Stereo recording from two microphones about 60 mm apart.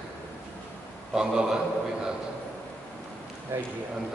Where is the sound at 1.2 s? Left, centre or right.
Centre.